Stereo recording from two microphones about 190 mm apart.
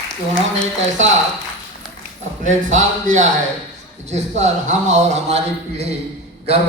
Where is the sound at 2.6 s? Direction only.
40° right (ahead or behind).